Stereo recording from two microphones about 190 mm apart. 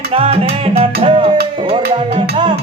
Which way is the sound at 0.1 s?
30° right (ahead or behind).